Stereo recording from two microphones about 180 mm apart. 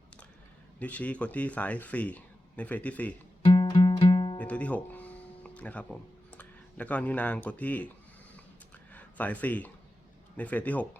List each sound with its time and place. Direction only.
0.8 s speech: 10° left (ahead or behind)
3.4 s music: 25° left (ahead or behind)
4.4 s music: 5° left (ahead or behind)
8.9 s speech: 10° left (ahead or behind)